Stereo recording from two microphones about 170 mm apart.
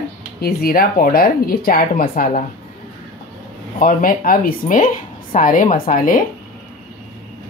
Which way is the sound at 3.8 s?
55° left (ahead or behind).